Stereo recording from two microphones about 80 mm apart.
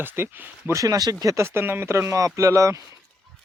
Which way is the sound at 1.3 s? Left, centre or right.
Right.